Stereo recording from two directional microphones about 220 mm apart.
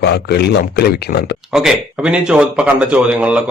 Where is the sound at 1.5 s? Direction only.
Centre (ahead or behind).